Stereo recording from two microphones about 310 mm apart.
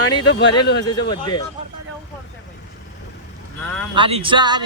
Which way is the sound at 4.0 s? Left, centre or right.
Centre.